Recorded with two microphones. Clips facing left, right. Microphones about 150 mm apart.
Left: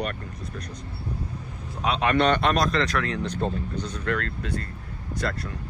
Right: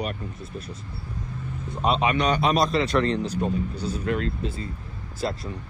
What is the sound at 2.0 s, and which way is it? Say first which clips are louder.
Speech: left 5 dB; 60° left (ahead or behind).